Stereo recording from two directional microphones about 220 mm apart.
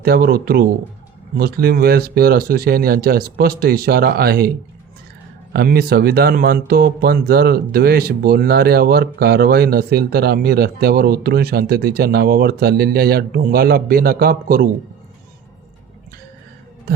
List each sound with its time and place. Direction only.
0.0 s speech: 45° right (ahead or behind)
5.5 s speech: 45° right (ahead or behind)